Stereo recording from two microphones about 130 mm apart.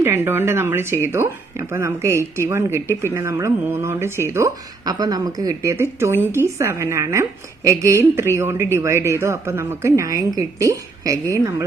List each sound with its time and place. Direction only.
0.0 s speech: 20° right (ahead or behind)
5.7 s speech: 20° right (ahead or behind)